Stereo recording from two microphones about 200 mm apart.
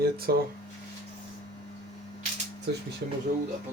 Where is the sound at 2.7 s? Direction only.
55° right (ahead or behind).